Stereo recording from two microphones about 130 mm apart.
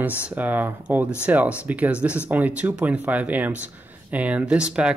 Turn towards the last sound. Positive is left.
turn(degrees=-10)  # may be behind; listen again after turning